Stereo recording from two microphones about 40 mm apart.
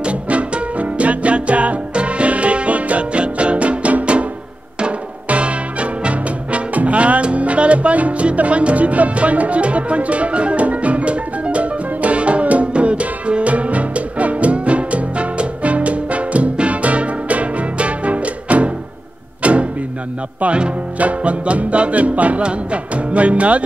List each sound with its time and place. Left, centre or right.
0.0 s music: right
21.0 s music: right